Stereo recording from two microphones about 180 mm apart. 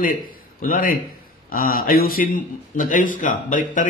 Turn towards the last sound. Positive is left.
turn(degrees=45)  # may be behind; listen again after turning